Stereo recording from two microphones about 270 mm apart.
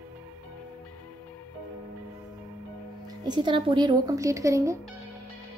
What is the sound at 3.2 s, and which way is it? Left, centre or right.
Speech, centre.